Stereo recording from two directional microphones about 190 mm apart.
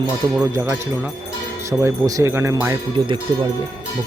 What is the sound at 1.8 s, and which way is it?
Speech, 15° right (ahead or behind).